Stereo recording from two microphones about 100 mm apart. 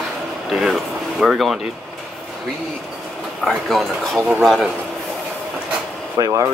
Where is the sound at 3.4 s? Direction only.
Centre (ahead or behind).